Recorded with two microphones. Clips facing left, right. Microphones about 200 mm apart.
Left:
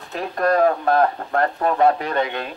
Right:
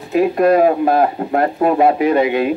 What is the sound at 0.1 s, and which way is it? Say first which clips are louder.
Speech: right 8 dB; 10° right (ahead or behind).